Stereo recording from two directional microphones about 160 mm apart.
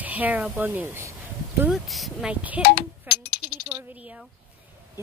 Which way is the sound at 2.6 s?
80° left.